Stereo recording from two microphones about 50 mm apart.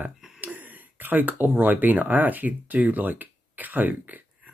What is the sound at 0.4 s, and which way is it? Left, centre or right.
Speech, right.